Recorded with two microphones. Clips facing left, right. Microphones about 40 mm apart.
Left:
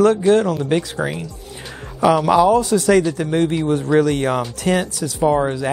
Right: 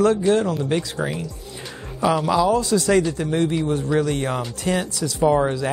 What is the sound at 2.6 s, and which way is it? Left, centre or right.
Speech, left.